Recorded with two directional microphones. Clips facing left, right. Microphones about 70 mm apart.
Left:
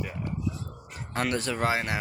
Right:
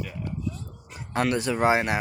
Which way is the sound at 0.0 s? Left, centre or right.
Left.